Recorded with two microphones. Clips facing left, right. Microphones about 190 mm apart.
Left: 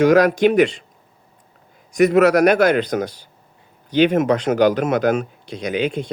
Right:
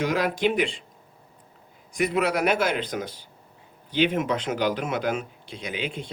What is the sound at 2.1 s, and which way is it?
Speech, 75° left (ahead or behind).